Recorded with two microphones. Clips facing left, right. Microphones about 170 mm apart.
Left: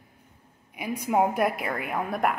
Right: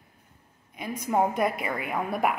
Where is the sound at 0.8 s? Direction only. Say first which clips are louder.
Left 1 dB; 10° left (ahead or behind).